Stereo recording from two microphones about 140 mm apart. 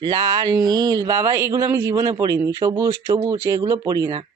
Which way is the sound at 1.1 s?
20° right (ahead or behind).